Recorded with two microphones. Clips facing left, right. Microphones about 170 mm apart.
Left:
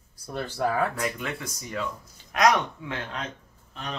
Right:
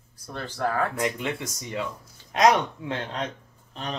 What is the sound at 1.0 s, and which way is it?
Speech, 25° right (ahead or behind).